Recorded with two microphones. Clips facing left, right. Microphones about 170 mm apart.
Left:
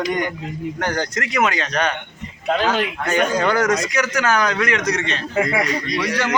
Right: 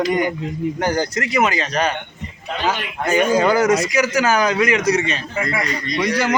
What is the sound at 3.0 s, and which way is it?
A man's voice, 10° right (ahead or behind).